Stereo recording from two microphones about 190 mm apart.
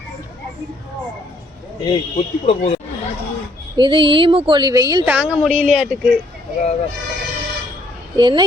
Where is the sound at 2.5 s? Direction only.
30° left (ahead or behind).